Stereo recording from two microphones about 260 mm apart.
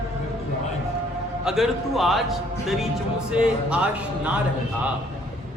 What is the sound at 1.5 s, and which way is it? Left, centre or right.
A man's voice, centre.